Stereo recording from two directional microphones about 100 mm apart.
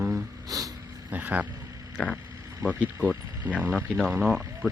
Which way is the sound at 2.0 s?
5° left (ahead or behind).